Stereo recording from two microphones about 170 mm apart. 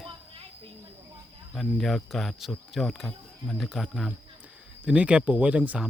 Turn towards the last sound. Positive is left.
turn(degrees=-10)  # may be behind; listen again after turning